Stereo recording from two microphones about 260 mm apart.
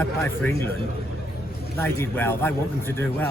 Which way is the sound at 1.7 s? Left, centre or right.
Centre.